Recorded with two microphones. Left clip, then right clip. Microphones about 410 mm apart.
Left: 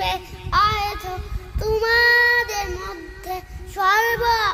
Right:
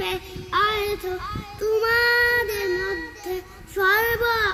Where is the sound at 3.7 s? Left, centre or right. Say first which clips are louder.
Left 2 dB; centre.